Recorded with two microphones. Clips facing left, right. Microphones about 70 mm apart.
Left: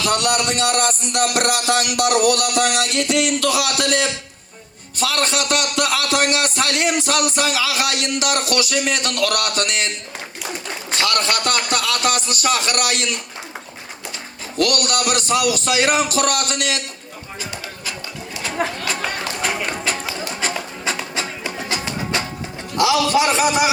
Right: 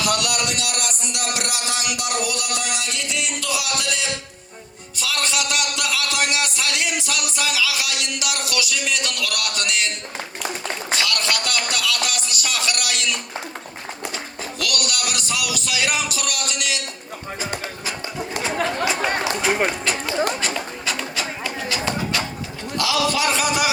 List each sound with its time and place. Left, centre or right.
0.0 s a man's voice: left
10.9 s a sound: left
14.6 s a man's voice: left
18.6 s speech: centre
18.9 s speech: right
19.2 s run: centre
20.8 s music: left
23.1 s a sound: left